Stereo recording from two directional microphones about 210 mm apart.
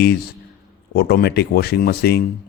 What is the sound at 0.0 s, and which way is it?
Speech, 50° left (ahead or behind).